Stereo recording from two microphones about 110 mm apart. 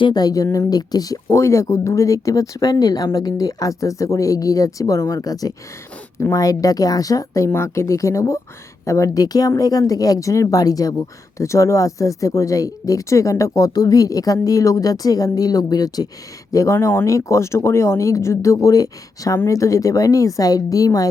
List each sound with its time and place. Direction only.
0.0 s speech: 40° left (ahead or behind)
0.4 s speech: 25° left (ahead or behind)
0.7 s speech: 35° left (ahead or behind)